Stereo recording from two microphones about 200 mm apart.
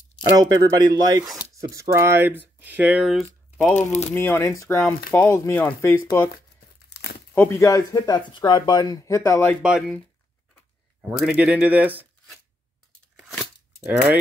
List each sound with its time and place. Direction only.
0.2 s speech: 20° right (ahead or behind); by 3.3 s centre (ahead or behind)
4.1 s speech: 10° left (ahead or behind)
7.3 s speech: 10° left (ahead or behind)
9.6 s speech: 5° right (ahead or behind)
11.0 s speech: 5° right (ahead or behind)
13.1 s crunch: centre (ahead or behind)